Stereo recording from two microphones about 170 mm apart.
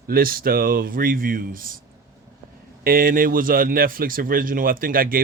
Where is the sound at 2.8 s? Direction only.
55° right (ahead or behind).